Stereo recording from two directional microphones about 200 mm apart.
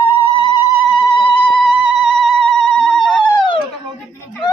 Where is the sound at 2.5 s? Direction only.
5° left (ahead or behind).